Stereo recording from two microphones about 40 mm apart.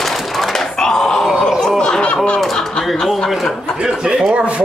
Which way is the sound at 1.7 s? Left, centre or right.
Left.